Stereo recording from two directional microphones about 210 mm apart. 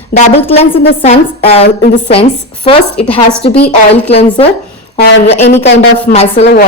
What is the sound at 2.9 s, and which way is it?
Speech, 5° left (ahead or behind).